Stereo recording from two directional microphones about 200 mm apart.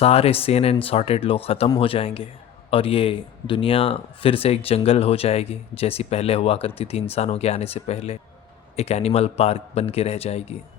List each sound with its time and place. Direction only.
0.0 s a man's voice: 30° left (ahead or behind)